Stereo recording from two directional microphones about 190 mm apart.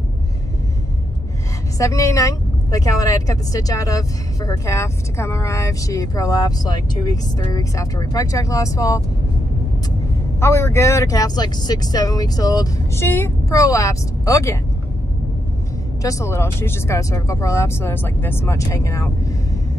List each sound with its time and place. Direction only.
1.8 s speech: 15° left (ahead or behind)
10.4 s speech: 15° left (ahead or behind)
16.0 s speech: 15° left (ahead or behind)